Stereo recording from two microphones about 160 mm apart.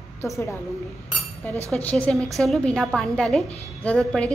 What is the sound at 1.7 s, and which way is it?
A woman's voice, 10° left (ahead or behind).